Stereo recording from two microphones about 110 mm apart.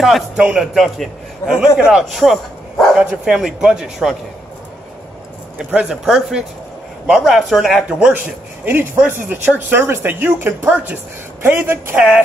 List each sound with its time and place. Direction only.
0.0 s a man's voice: 5° right (ahead or behind)
5.6 s a man's voice: 10° right (ahead or behind)
8.6 s speech: 20° right (ahead or behind)